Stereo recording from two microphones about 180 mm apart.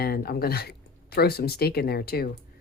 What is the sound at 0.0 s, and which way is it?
Speech, 60° left (ahead or behind).